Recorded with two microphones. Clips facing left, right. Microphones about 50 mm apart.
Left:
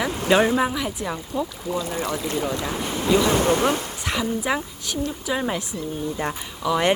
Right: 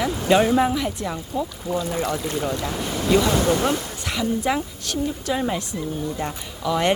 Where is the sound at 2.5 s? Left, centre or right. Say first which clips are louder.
Even; centre.